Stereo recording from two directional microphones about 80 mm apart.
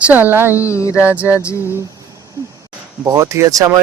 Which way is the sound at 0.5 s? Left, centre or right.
Left.